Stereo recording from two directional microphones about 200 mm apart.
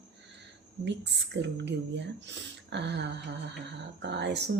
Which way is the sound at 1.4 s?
60° right (ahead or behind).